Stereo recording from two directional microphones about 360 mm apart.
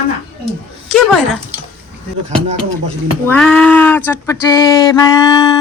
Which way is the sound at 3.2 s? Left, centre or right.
Centre.